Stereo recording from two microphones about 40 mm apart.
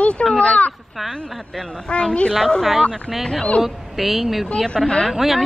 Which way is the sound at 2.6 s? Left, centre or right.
Centre.